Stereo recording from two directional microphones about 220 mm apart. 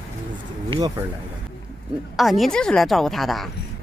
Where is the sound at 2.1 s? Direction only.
Centre (ahead or behind).